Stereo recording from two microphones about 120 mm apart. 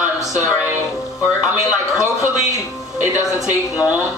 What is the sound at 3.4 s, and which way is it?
Speech, 5° right (ahead or behind).